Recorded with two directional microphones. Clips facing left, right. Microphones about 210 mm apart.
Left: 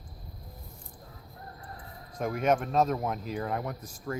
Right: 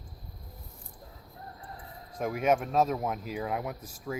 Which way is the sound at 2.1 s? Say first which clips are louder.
Even; 5° right (ahead or behind).